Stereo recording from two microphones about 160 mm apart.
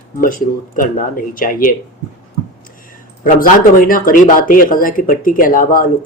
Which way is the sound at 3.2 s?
60° left (ahead or behind).